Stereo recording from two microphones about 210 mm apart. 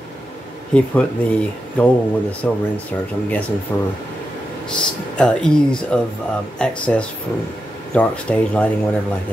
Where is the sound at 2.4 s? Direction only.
5° left (ahead or behind).